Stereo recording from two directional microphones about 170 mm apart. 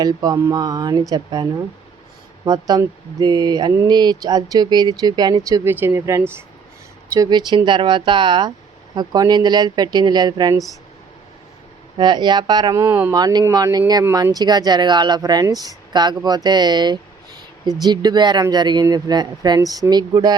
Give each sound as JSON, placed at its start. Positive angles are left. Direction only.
{"t": 0.0, "sound": "speech", "side_deg": -25}
{"t": 11.9, "sound": "speech", "side_deg": -25}